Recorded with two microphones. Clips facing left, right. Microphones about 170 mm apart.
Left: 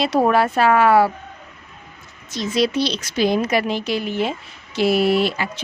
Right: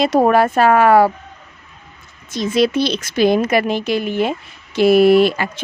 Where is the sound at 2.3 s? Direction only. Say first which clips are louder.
Right 4 dB; 55° right (ahead or behind).